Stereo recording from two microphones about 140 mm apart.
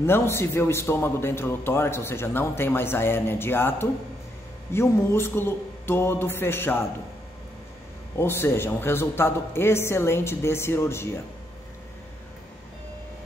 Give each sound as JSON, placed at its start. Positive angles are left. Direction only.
{"t": 0.0, "sound": "a man's voice", "side_deg": 15}
{"t": 8.2, "sound": "a man's voice", "side_deg": 15}